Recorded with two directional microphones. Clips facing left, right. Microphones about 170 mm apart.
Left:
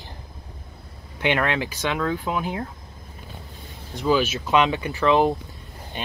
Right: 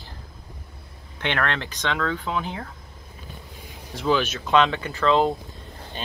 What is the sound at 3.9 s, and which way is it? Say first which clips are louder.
Speech: left 2 dB; 5° left (ahead or behind).